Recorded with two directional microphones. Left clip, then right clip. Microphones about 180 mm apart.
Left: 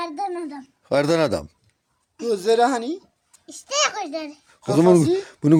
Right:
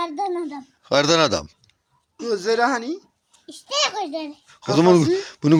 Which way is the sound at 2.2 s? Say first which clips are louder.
Left 2 dB; 30° left (ahead or behind).